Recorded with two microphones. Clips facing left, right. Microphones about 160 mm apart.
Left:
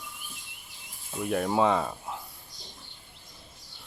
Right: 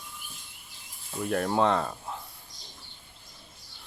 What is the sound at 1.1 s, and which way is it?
Speech, 5° left (ahead or behind).